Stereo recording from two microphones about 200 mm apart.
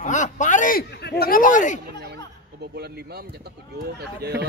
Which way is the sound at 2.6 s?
55° right (ahead or behind).